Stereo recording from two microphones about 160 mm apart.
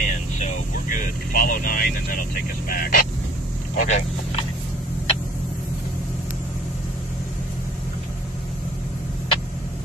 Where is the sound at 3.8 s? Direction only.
45° left (ahead or behind).